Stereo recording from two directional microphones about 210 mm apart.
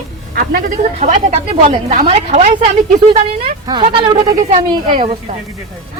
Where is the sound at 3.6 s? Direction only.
20° right (ahead or behind).